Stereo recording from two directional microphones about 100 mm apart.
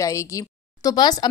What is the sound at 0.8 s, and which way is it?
Speech, 40° left (ahead or behind).